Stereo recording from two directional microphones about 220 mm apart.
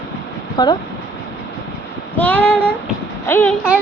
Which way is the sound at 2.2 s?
5° left (ahead or behind).